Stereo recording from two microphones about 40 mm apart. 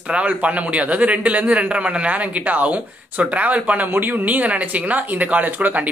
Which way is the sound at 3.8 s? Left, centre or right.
Right.